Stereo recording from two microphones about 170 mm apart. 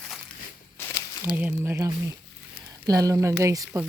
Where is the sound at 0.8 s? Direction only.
15° left (ahead or behind).